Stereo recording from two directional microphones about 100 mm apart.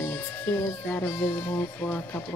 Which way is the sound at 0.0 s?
20° left (ahead or behind).